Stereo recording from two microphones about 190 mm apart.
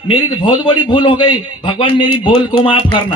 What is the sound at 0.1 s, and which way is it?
A man's voice, 25° left (ahead or behind).